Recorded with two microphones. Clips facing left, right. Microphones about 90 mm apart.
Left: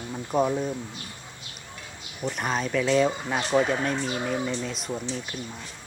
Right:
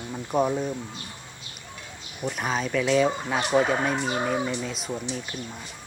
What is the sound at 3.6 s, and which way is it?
Speech, 50° right (ahead or behind).